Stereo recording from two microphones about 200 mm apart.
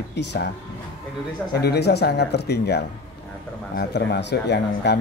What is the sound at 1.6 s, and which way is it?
A man's voice, 55° left (ahead or behind).